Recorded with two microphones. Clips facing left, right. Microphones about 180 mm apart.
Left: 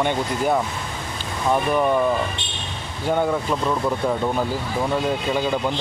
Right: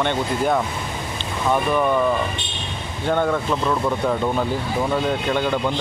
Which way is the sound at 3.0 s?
10° left (ahead or behind).